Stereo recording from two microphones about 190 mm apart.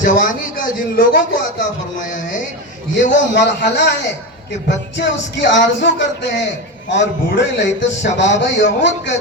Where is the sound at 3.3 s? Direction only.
65° left (ahead or behind).